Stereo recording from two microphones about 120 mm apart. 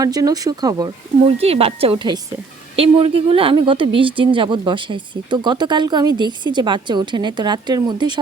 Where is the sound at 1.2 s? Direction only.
55° right (ahead or behind).